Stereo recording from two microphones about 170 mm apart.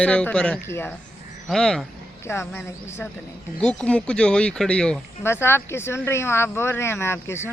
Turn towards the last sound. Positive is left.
turn(degrees=15)  # may be behind; listen again after turning